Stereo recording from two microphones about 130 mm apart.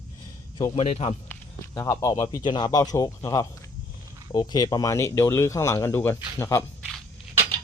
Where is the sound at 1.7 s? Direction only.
25° left (ahead or behind).